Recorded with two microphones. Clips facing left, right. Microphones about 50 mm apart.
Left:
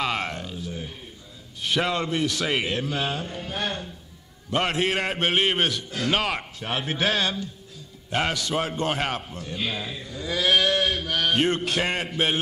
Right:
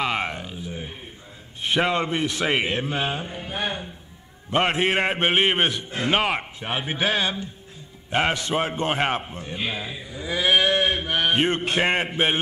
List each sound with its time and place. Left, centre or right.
0.0 s a sound: centre
1.6 s a man's voice: right
4.5 s a man's voice: right